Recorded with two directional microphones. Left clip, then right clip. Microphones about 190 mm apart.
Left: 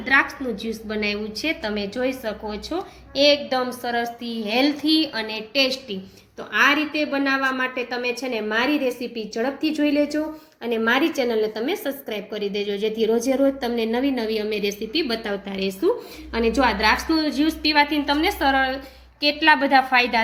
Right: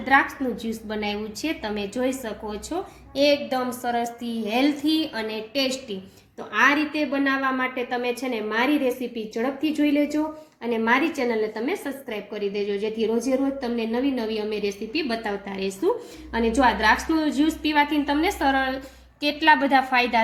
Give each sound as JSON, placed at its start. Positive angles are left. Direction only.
{"t": 0.0, "sound": "a woman's voice", "side_deg": -15}